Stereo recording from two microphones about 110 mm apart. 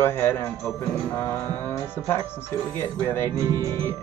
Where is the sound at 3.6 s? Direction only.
20° left (ahead or behind).